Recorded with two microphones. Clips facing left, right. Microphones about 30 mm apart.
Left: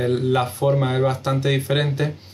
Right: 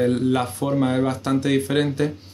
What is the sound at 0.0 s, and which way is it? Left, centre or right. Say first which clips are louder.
Speech: even; centre.